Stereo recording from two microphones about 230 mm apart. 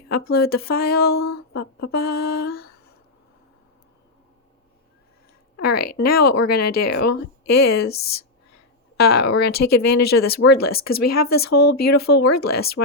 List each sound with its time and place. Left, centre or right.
0.1 s speech: left
5.6 s speech: left
5.9 s speech: left